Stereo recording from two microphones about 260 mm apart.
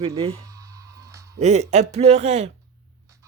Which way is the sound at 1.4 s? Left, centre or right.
Right.